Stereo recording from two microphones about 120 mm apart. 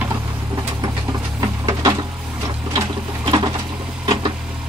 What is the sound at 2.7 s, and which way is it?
Sewing machine, 35° right (ahead or behind).